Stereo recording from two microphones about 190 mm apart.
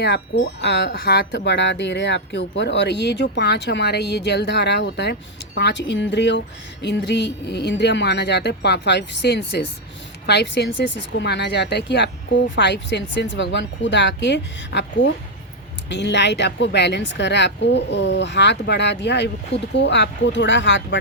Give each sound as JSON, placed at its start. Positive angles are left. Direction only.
{"t": 0.0, "sound": "speech", "side_deg": 60}
{"t": 0.9, "sound": "a woman's voice", "side_deg": 55}